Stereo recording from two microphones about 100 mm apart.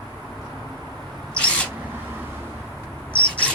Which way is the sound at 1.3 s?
10° left (ahead or behind).